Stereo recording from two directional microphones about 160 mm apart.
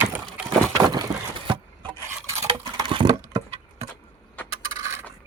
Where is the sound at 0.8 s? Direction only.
25° right (ahead or behind).